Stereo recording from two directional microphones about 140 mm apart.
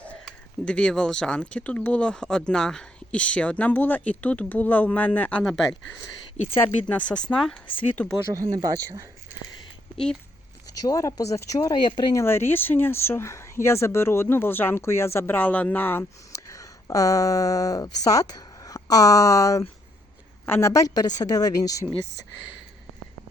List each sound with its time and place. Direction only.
0.3 s speech: 5° left (ahead or behind)
6.3 s speech: 50° left (ahead or behind)
6.6 s speech: 10° left (ahead or behind)
8.5 s speech: 25° right (ahead or behind)
10.8 s a woman's voice: 25° left (ahead or behind)
12.1 s a woman's voice: 15° left (ahead or behind)